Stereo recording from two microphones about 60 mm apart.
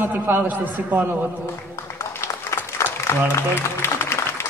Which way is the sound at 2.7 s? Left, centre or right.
Left.